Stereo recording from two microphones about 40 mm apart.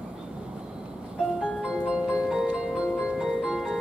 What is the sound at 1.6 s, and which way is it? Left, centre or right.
Music, right.